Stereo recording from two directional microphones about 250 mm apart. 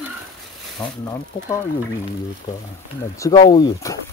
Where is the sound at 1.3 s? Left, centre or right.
Left.